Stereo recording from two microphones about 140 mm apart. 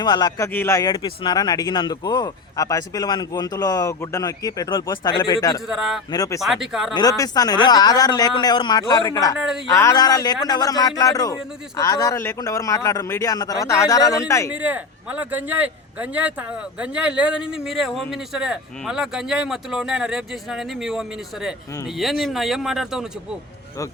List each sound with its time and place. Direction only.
0.0 s speech: 30° left (ahead or behind)
0.9 s speech: 35° left (ahead or behind)
5.6 s speech: centre (ahead or behind)
6.1 s speech: 25° left (ahead or behind)
6.4 s speech: centre (ahead or behind)
6.9 s speech: 25° left (ahead or behind)
14.5 s speech: 10° right (ahead or behind)